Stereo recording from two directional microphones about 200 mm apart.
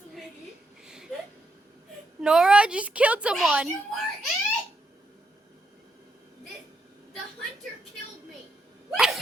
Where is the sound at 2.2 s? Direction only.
5° right (ahead or behind).